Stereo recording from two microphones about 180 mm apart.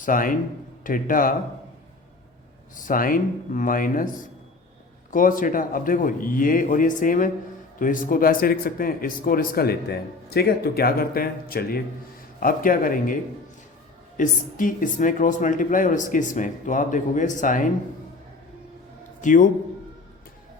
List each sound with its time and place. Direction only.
0.0 s speech: 50° left (ahead or behind)
2.8 s speech: 50° left (ahead or behind)
5.1 s speech: 50° left (ahead or behind)
14.2 s speech: 50° left (ahead or behind)
19.2 s speech: 45° left (ahead or behind)